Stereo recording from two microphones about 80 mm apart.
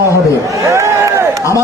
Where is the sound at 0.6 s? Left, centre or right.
Right.